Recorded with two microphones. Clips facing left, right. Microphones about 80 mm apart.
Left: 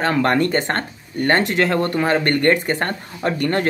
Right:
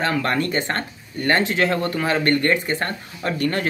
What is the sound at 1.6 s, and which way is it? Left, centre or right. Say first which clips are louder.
Speech: left 3 dB; left.